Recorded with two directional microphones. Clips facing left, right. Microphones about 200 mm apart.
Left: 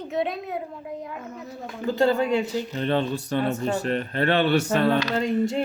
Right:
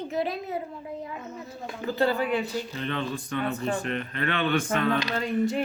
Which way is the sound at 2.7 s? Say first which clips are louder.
Left 6 dB; 35° left (ahead or behind).